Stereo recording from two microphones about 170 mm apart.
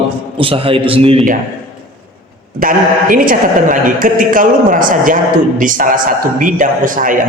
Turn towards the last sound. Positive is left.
turn(degrees=-50)  # may be behind; listen again after turning